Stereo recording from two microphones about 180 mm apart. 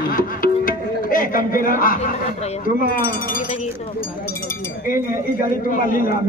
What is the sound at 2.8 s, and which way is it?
Speech, 50° left (ahead or behind).